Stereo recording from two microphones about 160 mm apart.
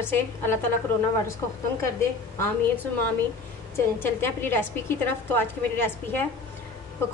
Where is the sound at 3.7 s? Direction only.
15° left (ahead or behind).